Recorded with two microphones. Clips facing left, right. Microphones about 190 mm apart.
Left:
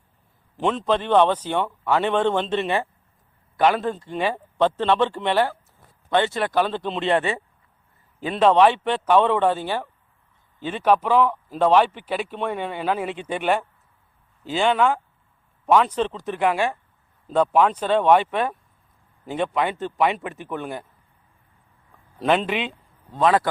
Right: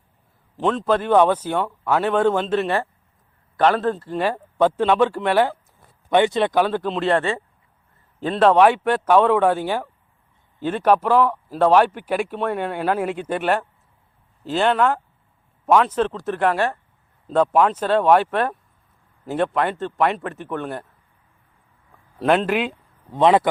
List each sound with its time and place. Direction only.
0.5 s speech: centre (ahead or behind)
3.9 s speech: 5° right (ahead or behind)
7.2 s speech: 15° left (ahead or behind)
8.2 s speech: centre (ahead or behind)
22.2 s speech: centre (ahead or behind)
23.1 s a man's voice: 20° right (ahead or behind)